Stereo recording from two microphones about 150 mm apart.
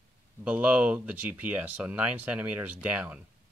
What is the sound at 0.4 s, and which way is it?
Speech, 10° right (ahead or behind).